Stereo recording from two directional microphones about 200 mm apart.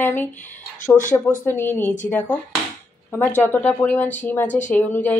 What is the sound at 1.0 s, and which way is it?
Speech, 40° left (ahead or behind).